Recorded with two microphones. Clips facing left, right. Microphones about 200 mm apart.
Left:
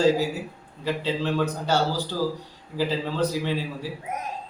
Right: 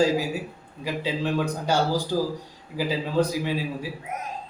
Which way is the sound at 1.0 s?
10° right (ahead or behind).